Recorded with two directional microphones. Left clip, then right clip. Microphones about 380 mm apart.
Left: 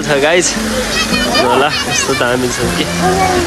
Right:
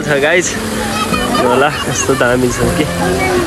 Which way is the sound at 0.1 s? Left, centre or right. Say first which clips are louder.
Left 1 dB; centre.